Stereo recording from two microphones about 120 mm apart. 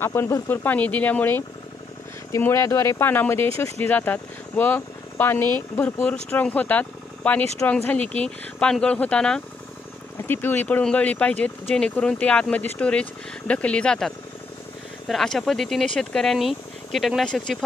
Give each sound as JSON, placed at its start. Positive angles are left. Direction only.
{"t": 0.0, "sound": "speech", "side_deg": 20}